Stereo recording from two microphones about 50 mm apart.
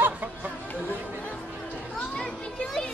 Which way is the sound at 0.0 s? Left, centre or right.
Right.